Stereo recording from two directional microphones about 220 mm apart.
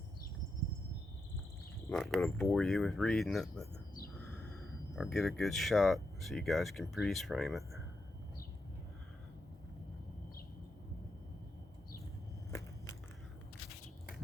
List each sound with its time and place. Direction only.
1.9 s speech: centre (ahead or behind)
4.9 s speech: centre (ahead or behind)